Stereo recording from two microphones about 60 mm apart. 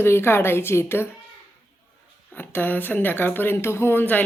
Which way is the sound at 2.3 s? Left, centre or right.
Left.